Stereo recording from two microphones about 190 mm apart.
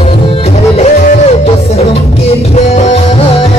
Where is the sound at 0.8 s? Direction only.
35° left (ahead or behind).